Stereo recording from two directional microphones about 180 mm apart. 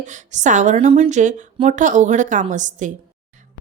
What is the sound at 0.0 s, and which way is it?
A woman's voice, 40° right (ahead or behind).